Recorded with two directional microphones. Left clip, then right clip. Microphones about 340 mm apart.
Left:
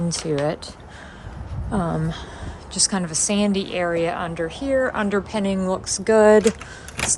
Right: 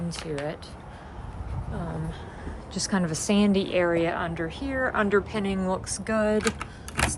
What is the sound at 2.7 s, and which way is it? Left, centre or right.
A woman's voice, centre.